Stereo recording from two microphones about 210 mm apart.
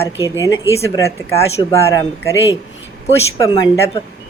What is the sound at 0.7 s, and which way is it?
Speech, 15° left (ahead or behind).